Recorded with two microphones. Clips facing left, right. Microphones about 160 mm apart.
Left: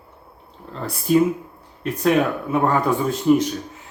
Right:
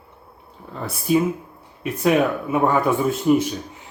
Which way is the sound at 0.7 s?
5° right (ahead or behind).